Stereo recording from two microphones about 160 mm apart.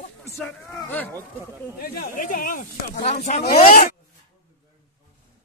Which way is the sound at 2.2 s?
60° left (ahead or behind).